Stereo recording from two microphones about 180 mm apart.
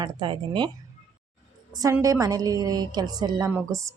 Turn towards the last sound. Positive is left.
turn(degrees=-20)  # may be behind; listen again after turning